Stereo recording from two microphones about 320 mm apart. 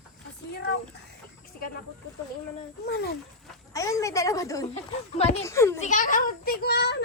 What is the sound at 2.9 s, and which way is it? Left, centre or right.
Speech, left.